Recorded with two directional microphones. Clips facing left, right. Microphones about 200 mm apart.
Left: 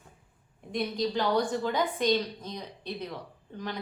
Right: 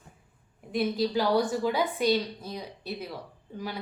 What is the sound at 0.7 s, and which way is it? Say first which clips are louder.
A woman's voice: right 3 dB; 5° right (ahead or behind).